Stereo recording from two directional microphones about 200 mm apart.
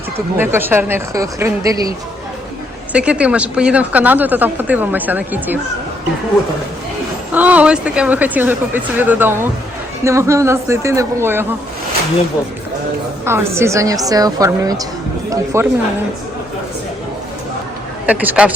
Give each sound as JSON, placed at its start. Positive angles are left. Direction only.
{"t": 0.3, "sound": "speech", "side_deg": -10}
{"t": 2.9, "sound": "speech", "side_deg": -5}
{"t": 7.3, "sound": "speech", "side_deg": -10}
{"t": 13.2, "sound": "speech", "side_deg": -15}
{"t": 18.0, "sound": "speech", "side_deg": -5}